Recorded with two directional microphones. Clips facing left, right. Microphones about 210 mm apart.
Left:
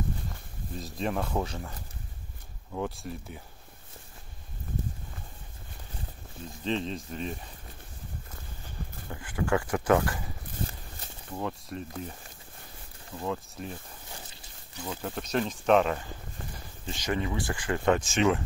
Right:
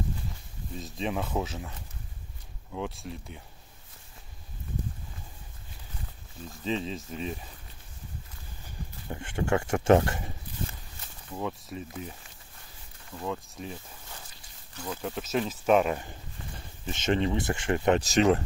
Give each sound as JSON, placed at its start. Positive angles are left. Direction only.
{"t": 0.7, "sound": "speech", "side_deg": 0}
{"t": 2.7, "sound": "speech", "side_deg": 0}
{"t": 6.6, "sound": "speech", "side_deg": 0}
{"t": 9.1, "sound": "speech", "side_deg": -25}
{"t": 11.3, "sound": "speech", "side_deg": 0}
{"t": 13.2, "sound": "speech", "side_deg": 0}
{"t": 14.8, "sound": "speech", "side_deg": 0}
{"t": 16.8, "sound": "speech", "side_deg": -25}
{"t": 17.9, "sound": "speech", "side_deg": -40}